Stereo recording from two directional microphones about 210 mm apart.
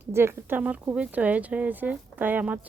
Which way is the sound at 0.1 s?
10° right (ahead or behind).